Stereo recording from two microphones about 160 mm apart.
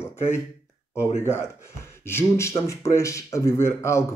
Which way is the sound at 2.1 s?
15° left (ahead or behind).